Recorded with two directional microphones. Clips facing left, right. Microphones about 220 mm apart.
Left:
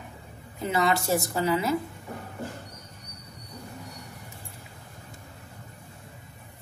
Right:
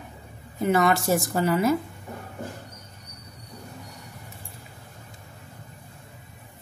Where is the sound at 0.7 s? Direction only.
50° right (ahead or behind).